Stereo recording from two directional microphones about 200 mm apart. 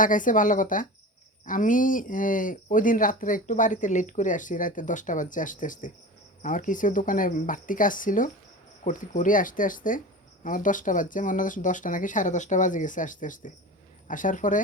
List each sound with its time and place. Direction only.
0.0 s speech: 40° left (ahead or behind)